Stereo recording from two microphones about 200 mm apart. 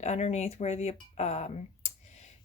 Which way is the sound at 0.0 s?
35° left (ahead or behind).